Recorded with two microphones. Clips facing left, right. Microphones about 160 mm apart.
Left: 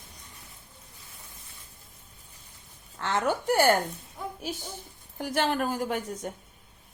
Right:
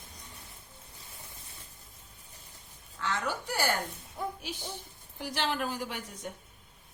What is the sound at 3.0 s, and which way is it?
Speech, 55° left (ahead or behind).